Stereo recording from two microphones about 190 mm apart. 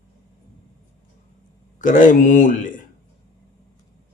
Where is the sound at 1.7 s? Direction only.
40° left (ahead or behind).